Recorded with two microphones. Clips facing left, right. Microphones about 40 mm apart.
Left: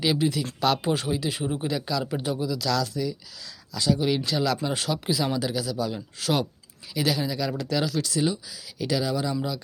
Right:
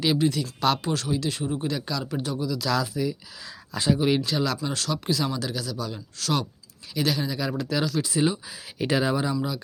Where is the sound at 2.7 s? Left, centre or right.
Centre.